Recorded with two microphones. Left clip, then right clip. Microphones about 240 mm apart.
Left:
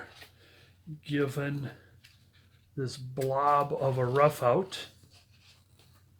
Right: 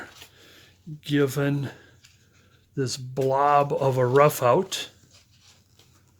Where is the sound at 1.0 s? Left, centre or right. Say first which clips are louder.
Right 8 dB; right.